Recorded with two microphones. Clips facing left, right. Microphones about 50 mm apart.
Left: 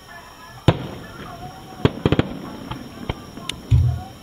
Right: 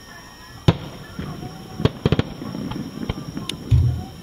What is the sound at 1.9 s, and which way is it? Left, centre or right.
Fireworks, centre.